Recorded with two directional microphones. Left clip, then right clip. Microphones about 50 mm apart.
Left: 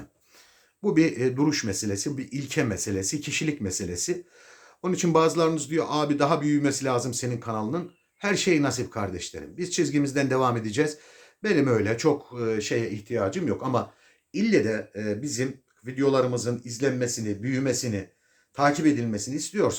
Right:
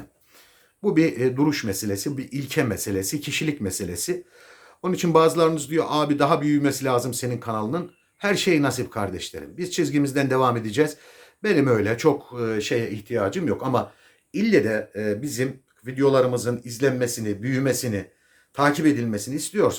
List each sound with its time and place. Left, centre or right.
0.8 s speech: centre; by 4.2 s right
4.4 s speech: right